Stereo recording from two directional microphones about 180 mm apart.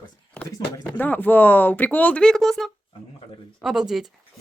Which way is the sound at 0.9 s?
10° left (ahead or behind).